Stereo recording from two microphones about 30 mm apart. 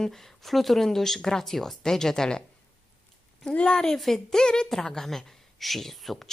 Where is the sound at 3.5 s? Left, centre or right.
Left.